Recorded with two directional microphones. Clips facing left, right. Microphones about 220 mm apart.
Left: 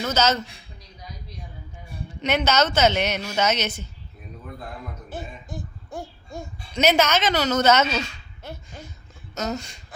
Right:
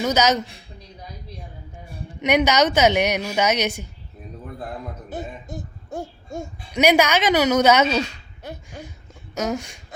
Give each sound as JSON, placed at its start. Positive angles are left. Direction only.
{"t": 0.0, "sound": "a woman's voice", "side_deg": -15}
{"t": 2.2, "sound": "a woman's voice", "side_deg": -15}
{"t": 5.0, "sound": "music", "side_deg": -20}
{"t": 6.7, "sound": "a woman's voice", "side_deg": -15}
{"t": 8.4, "sound": "a sound", "side_deg": -15}
{"t": 9.3, "sound": "speech", "side_deg": -10}